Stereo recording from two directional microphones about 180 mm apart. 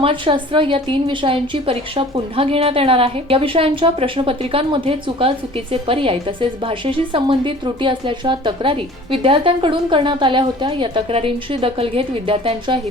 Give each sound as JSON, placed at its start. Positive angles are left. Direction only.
{"t": 0.0, "sound": "a woman's voice", "side_deg": -30}